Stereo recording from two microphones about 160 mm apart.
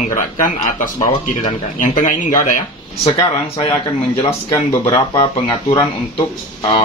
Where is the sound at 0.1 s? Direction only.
50° left (ahead or behind).